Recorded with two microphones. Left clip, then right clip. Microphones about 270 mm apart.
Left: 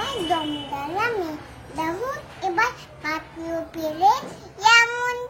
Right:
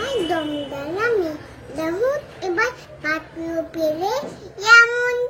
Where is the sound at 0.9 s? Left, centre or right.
Centre.